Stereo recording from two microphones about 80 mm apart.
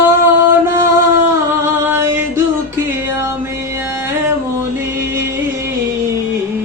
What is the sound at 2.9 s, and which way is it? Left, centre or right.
Music, right.